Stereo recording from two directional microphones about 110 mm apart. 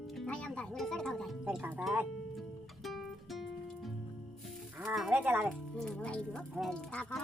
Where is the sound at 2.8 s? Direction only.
Centre (ahead or behind).